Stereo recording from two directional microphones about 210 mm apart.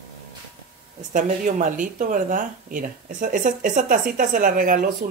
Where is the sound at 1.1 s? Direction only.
40° right (ahead or behind).